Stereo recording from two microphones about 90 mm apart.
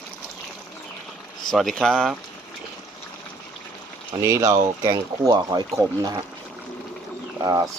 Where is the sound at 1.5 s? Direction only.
5° left (ahead or behind).